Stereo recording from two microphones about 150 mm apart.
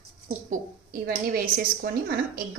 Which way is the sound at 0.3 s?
65° right (ahead or behind).